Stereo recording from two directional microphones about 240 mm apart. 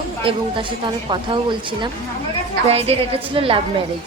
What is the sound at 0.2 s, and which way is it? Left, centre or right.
A woman's voice, right.